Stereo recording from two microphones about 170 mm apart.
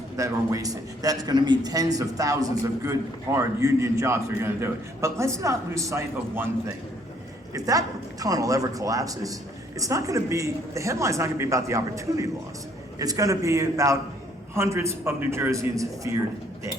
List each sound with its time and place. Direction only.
0.2 s a man's voice: 20° right (ahead or behind)